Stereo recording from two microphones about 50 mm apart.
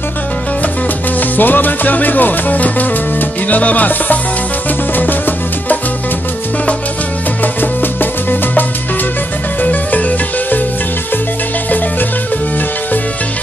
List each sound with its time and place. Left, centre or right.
1.3 s music: left
7.6 s music: left